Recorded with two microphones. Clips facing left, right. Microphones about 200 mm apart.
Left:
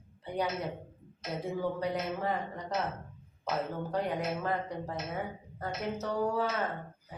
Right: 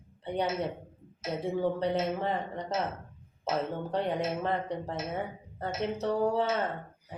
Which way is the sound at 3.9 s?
25° right (ahead or behind).